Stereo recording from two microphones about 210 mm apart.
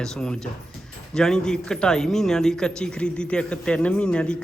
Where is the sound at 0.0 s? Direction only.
5° left (ahead or behind).